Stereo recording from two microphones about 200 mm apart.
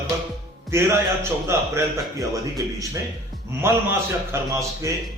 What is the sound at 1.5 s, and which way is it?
Speech, 15° right (ahead or behind).